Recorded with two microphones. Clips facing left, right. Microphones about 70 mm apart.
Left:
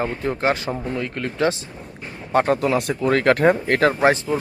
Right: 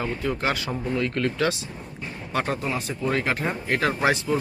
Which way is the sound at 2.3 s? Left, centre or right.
Left.